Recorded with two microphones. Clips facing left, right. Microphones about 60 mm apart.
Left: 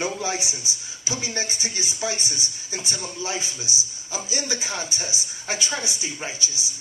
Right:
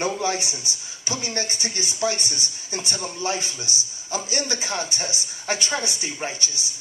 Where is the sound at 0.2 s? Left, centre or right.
Right.